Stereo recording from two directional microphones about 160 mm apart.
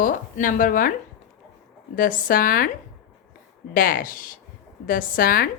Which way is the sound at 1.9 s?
60° left (ahead or behind).